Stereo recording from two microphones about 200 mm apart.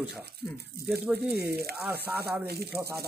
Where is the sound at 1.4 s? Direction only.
50° right (ahead or behind).